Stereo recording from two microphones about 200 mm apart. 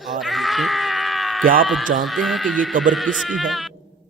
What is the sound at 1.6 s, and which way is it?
Speech, centre (ahead or behind).